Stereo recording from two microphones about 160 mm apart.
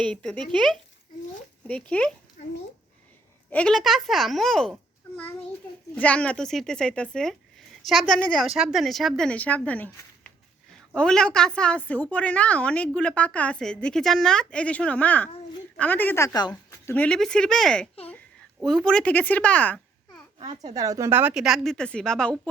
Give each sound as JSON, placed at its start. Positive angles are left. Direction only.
{"t": 0.0, "sound": "a woman's voice", "side_deg": 5}
{"t": 3.5, "sound": "a woman's voice", "side_deg": 5}
{"t": 16.5, "sound": "a woman's voice", "side_deg": 10}
{"t": 20.4, "sound": "speech", "side_deg": -30}